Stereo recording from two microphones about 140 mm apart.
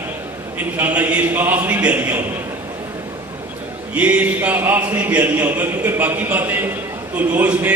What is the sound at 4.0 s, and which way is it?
A man's voice, 10° right (ahead or behind).